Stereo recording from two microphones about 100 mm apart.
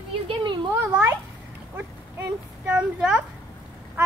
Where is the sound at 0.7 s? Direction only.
30° right (ahead or behind).